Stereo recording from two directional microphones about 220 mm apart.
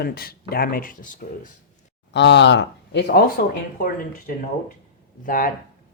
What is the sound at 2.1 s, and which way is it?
Speech, 50° left (ahead or behind).